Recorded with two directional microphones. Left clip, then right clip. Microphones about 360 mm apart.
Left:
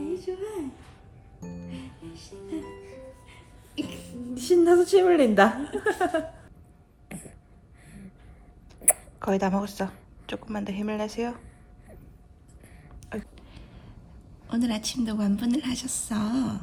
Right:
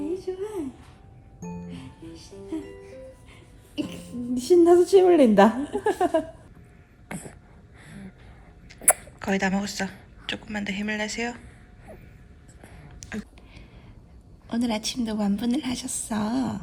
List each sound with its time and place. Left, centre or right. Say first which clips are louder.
0.0 s a sound: right 1 dB; centre
1.6 s music: even; centre
3.8 s a woman's voice: right 2 dB; centre
7.1 s a sound: right 5 dB; centre
8.7 s speech: right 4 dB; centre
12.6 s a sound: right 5 dB; centre
14.6 s a woman's voice: right 2 dB; centre
14.9 s a woman's voice: right 1 dB; centre
15.5 s a woman's voice: right 1 dB; centre
16.0 s a woman's voice: right 2 dB; centre